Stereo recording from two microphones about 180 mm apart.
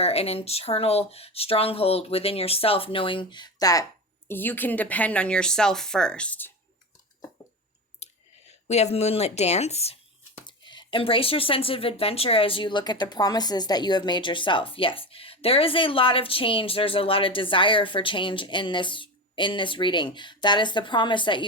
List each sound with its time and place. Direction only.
0.0 s speech: 35° left (ahead or behind); by 6.5 s 10° left (ahead or behind)
8.0 s a sound: 35° left (ahead or behind)
8.6 s speech: 35° left (ahead or behind)